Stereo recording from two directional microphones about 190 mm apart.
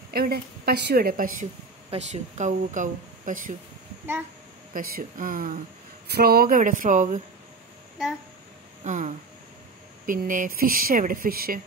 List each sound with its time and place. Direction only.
0.1 s speech: 55° right (ahead or behind)
1.9 s speech: 35° right (ahead or behind)
4.7 s speech: 50° right (ahead or behind)
8.8 s speech: 40° right (ahead or behind)